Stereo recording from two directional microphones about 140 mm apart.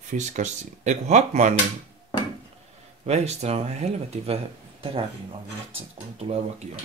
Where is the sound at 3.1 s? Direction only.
50° right (ahead or behind).